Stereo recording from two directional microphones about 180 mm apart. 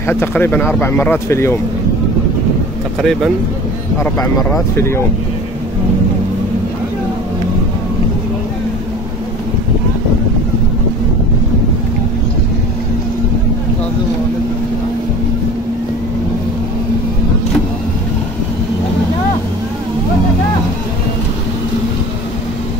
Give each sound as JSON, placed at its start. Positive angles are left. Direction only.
{"t": 0.0, "sound": "speech", "side_deg": 10}
{"t": 3.0, "sound": "speech", "side_deg": 0}
{"t": 4.0, "sound": "speech", "side_deg": 20}
{"t": 4.5, "sound": "speech", "side_deg": 10}